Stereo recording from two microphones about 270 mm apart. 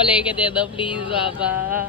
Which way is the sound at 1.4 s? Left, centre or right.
Centre.